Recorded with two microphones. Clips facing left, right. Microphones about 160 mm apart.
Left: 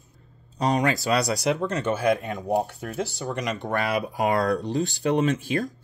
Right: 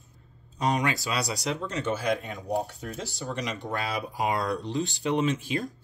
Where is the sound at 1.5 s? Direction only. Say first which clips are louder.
Left 4 dB; 55° left (ahead or behind).